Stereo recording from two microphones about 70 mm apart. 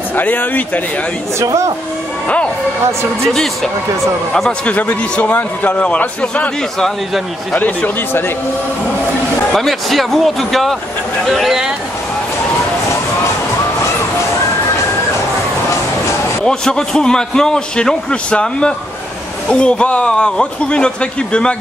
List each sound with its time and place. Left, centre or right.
0.1 s a man's voice: left
1.4 s speech: right
4.6 s a man's voice: centre
7.5 s a man's voice: left
9.5 s speech: centre
16.4 s a man's voice: centre